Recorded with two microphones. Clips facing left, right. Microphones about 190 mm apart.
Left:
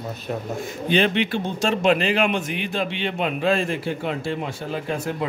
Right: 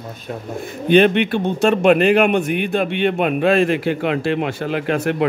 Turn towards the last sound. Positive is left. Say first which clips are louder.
# right 7 dB
turn(degrees=-75)  # may be behind; listen again after turning